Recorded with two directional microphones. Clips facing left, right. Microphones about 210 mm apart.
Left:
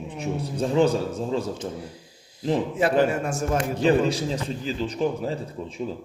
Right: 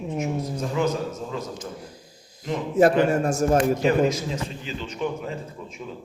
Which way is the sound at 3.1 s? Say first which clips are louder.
Right 4 dB; 40° right (ahead or behind).